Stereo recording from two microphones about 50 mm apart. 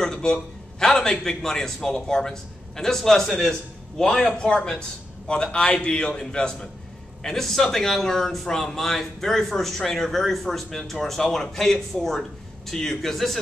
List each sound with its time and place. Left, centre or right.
0.0 s a man's voice: centre
11.2 s a man's voice: centre
11.5 s a man's voice: centre